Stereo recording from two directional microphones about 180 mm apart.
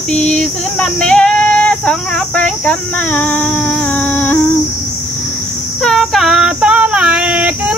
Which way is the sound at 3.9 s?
10° left (ahead or behind).